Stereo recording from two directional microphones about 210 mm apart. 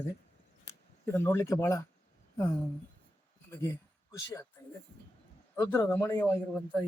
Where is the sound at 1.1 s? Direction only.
10° left (ahead or behind).